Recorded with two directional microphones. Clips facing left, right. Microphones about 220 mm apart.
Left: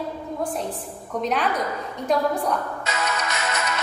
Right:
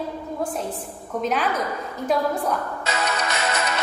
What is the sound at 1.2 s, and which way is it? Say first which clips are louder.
Speech: even; centre (ahead or behind).